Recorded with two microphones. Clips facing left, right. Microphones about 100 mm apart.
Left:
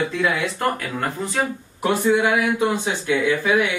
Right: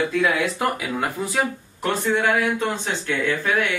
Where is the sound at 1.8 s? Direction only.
10° left (ahead or behind).